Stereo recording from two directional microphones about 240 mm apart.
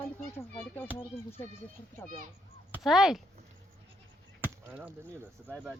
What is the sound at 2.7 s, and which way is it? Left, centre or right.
Speech, centre.